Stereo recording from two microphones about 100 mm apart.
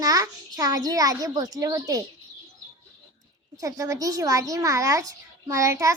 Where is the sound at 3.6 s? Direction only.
35° right (ahead or behind).